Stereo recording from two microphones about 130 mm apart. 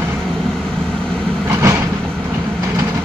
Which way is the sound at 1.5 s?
20° right (ahead or behind).